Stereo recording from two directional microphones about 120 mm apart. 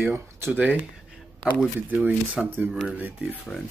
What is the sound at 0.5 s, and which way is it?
Speech, 10° right (ahead or behind).